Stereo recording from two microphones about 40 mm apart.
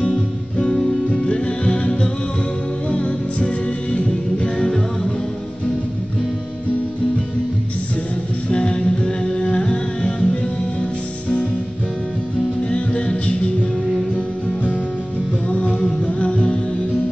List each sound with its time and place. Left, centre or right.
0.0 s music: left
8.5 s music: left
12.6 s music: left
16.1 s music: left